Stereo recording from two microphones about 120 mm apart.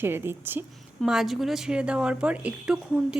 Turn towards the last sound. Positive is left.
turn(degrees=-5)  # may be behind; listen again after turning